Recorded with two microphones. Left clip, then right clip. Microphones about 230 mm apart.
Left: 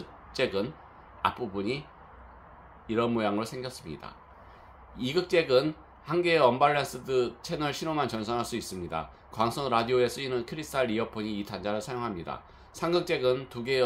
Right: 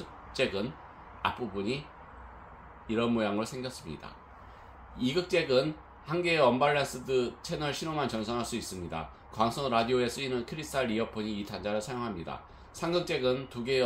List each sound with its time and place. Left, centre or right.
0.3 s speech: left
2.9 s speech: left